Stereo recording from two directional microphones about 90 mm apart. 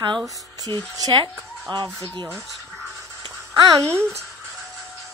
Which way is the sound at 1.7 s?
60° right (ahead or behind).